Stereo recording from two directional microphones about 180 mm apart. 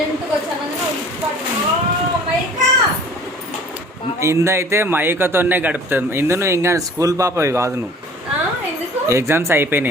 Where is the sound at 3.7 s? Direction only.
15° right (ahead or behind).